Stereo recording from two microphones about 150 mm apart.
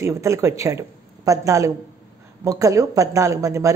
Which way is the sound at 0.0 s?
20° right (ahead or behind).